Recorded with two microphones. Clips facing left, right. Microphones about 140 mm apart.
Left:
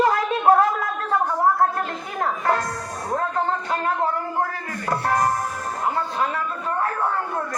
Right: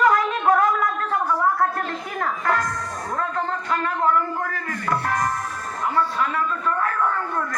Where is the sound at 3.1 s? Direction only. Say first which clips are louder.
Left 3 dB; 40° left (ahead or behind).